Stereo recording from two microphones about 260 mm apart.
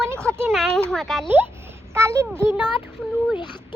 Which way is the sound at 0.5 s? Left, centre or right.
Centre.